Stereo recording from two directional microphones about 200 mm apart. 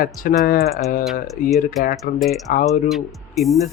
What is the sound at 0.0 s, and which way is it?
A man's voice, 45° left (ahead or behind).